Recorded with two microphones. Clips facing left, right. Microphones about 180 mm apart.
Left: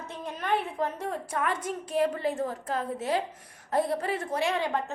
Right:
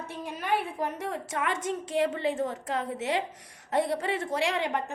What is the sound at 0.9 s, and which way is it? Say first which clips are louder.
Speech: left 1 dB; 80° right.